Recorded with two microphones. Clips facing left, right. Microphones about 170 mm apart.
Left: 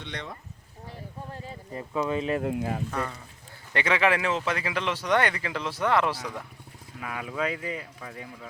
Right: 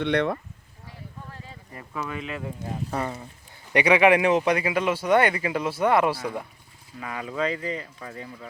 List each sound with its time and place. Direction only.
0.0 s speech: 65° right (ahead or behind)
1.3 s speech: 20° left (ahead or behind)
2.4 s speech: 80° left
2.9 s speech: 30° right (ahead or behind)
3.7 s speech: 15° right (ahead or behind)
7.0 s speech: 5° left (ahead or behind)